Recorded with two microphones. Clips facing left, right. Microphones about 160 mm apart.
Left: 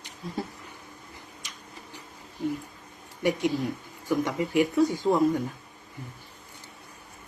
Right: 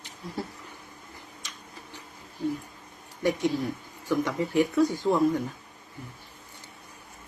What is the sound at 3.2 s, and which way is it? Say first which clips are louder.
Speech: even; 15° left (ahead or behind).